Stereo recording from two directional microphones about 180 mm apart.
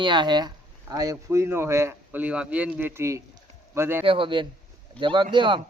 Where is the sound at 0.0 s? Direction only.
25° right (ahead or behind).